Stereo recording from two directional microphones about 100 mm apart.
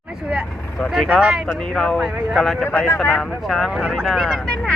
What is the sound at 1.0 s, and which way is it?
Speech, 10° right (ahead or behind).